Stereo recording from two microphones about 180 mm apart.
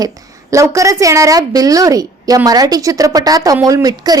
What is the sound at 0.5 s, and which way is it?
A woman's voice, 15° right (ahead or behind).